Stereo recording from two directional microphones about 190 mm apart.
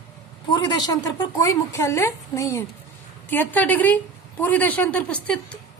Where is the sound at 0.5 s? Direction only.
20° left (ahead or behind).